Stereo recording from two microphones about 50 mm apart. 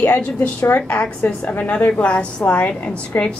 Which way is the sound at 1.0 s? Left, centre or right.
Left.